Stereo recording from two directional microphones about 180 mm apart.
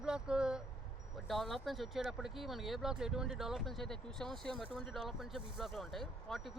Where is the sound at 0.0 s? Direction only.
5° right (ahead or behind).